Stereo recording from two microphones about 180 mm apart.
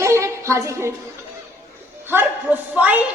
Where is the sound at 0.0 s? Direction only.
15° right (ahead or behind).